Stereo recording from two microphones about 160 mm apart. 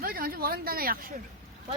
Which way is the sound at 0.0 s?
65° right (ahead or behind).